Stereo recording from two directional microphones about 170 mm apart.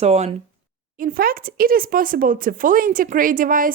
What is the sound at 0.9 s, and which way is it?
A woman's voice, 55° right (ahead or behind).